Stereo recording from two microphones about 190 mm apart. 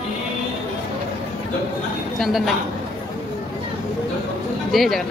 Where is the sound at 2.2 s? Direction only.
Centre (ahead or behind).